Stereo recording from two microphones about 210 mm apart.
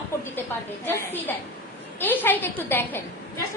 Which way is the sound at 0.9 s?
10° left (ahead or behind).